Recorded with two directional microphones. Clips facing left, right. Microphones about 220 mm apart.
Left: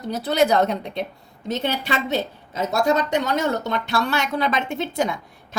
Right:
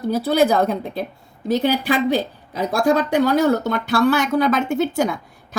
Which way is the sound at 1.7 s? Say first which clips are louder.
Right 6 dB; 25° left (ahead or behind).